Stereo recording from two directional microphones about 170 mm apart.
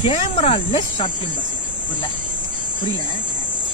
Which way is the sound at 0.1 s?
35° left (ahead or behind).